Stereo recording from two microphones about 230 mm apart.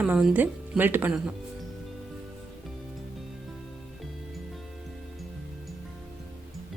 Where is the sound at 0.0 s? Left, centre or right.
Centre.